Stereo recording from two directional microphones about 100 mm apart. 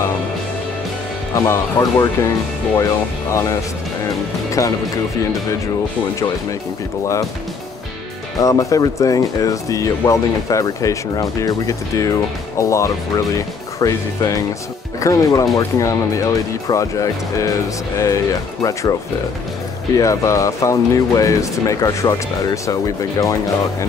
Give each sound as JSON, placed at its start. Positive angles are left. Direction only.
{"t": 1.3, "sound": "speech", "side_deg": 30}
{"t": 8.4, "sound": "speech", "side_deg": 35}
{"t": 20.0, "sound": "speech", "side_deg": 35}